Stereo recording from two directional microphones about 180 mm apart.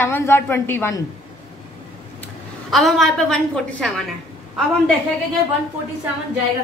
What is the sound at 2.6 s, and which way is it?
A woman's voice, centre (ahead or behind).